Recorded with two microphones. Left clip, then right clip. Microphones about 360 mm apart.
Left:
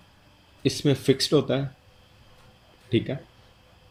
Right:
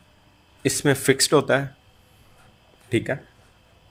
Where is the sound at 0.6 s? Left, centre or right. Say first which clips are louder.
Right 3 dB; centre.